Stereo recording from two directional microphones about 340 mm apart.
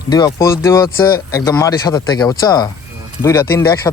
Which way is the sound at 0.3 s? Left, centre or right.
Centre.